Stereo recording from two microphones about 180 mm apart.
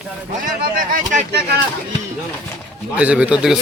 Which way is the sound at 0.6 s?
45° right (ahead or behind).